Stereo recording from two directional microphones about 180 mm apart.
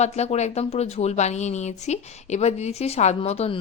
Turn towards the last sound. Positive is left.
turn(degrees=35)  # may be behind; listen again after turning